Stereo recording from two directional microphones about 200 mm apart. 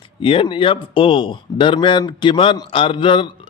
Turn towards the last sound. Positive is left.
turn(degrees=25)  # may be behind; listen again after turning